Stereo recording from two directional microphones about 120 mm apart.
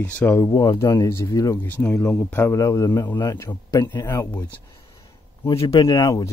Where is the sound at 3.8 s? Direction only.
40° left (ahead or behind).